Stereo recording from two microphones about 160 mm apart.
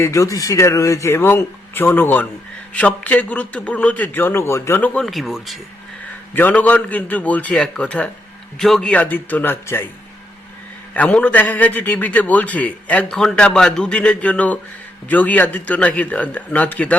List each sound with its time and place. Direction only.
0.0 s a man's voice: 20° left (ahead or behind); by 5.5 s centre (ahead or behind)
6.3 s a man's voice: 10° left (ahead or behind)
10.9 s a man's voice: 10° left (ahead or behind)